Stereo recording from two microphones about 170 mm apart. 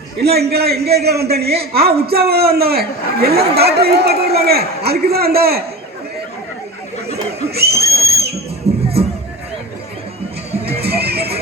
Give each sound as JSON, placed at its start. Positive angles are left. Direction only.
{"t": 0.2, "sound": "a man's voice", "side_deg": -70}
{"t": 7.5, "sound": "a man's voice", "side_deg": -70}
{"t": 8.7, "sound": "music", "side_deg": -35}
{"t": 10.6, "sound": "music", "side_deg": -70}